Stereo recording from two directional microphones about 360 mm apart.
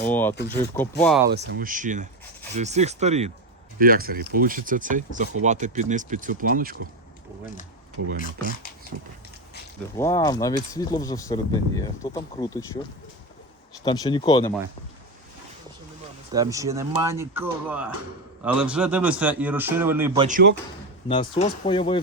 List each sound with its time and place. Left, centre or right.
0.0 s a man's voice: centre
1.3 s speech: right
8.2 s speech: left
10.0 s speech: centre
16.3 s a man's voice: centre
20.2 s speech: right
21.1 s speech: centre